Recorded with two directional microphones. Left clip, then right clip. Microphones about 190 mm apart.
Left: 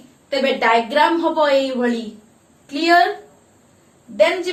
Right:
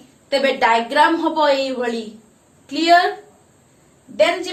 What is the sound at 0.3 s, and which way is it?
A woman's voice, 50° right (ahead or behind).